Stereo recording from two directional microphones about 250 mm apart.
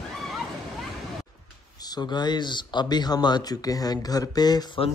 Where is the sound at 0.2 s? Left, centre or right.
Centre.